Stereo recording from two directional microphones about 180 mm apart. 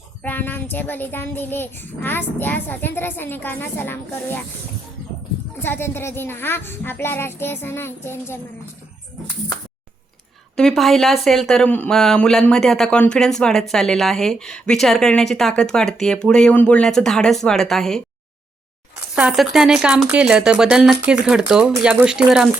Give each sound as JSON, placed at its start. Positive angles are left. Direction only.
{"t": 0.2, "sound": "child singing", "side_deg": 10}
{"t": 5.6, "sound": "child singing", "side_deg": 10}
{"t": 10.6, "sound": "speech", "side_deg": 0}
{"t": 19.1, "sound": "speech", "side_deg": -5}